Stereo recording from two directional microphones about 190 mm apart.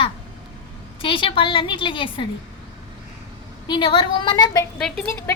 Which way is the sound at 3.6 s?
25° left (ahead or behind).